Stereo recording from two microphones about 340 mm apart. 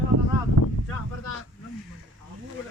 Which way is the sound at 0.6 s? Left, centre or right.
Right.